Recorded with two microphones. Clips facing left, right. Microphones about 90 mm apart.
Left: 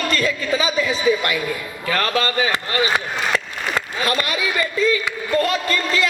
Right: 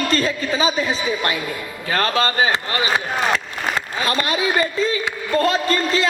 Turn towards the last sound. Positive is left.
turn(degrees=-35)  # may be behind; listen again after turning